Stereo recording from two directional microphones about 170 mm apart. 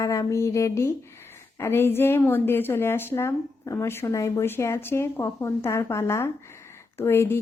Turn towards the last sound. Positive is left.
turn(degrees=15)  # may be behind; listen again after turning